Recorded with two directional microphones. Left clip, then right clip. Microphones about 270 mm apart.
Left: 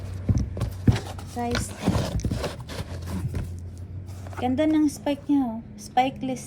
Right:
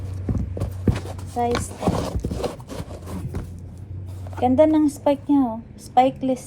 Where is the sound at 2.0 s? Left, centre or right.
Centre.